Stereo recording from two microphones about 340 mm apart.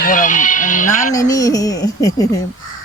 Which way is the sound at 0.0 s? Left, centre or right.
Left.